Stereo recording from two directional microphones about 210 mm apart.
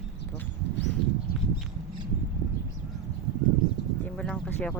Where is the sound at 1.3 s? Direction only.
45° left (ahead or behind).